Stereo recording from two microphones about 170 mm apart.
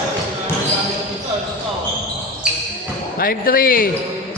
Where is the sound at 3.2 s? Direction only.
60° left (ahead or behind).